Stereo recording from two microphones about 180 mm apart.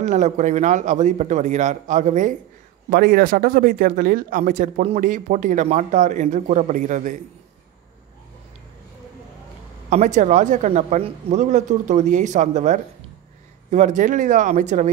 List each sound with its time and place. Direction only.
0.0 s speech: 40° right (ahead or behind)
2.9 s speech: 55° right (ahead or behind)
9.8 s speech: 40° right (ahead or behind)